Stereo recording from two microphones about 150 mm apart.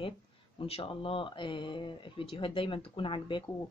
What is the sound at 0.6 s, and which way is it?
Speech, 40° left (ahead or behind).